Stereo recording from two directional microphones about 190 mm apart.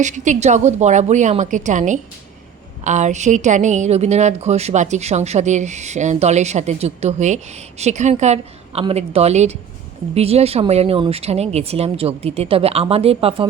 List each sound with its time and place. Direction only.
0.0 s a woman's voice: 40° right (ahead or behind)